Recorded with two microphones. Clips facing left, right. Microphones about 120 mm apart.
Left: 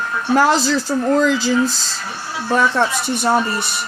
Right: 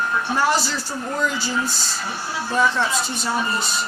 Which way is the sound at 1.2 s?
90° left.